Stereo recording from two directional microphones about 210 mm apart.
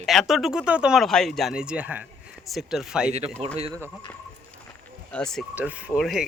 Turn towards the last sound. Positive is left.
turn(degrees=0)  # may be behind; listen again after turning